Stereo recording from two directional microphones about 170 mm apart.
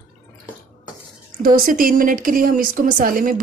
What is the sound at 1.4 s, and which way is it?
Speech, 55° right (ahead or behind).